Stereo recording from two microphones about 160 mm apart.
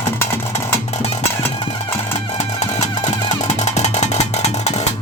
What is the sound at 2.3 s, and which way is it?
Music, 45° left (ahead or behind).